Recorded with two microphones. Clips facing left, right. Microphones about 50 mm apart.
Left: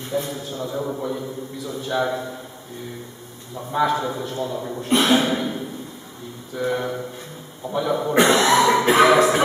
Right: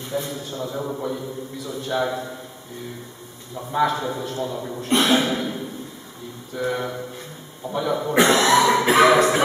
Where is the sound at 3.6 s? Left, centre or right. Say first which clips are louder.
Left 1 dB; centre.